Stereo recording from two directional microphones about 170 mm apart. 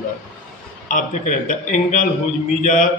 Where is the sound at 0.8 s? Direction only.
50° left (ahead or behind).